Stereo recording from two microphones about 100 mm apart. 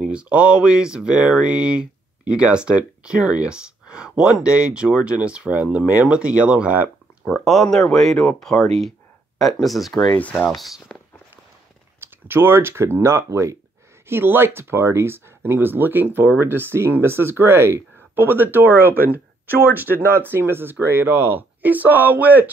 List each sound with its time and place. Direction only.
0.1 s speech: 10° right (ahead or behind)
7.4 s speech: 5° left (ahead or behind)
12.0 s speech: 20° right (ahead or behind)